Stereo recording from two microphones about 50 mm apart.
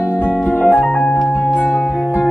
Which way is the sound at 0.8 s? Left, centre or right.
Centre.